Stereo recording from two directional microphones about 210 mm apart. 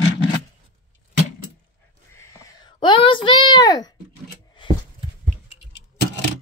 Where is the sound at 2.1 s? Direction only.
15° left (ahead or behind).